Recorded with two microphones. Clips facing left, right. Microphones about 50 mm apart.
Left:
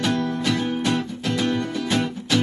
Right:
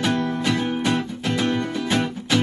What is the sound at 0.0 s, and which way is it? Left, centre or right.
Music, right.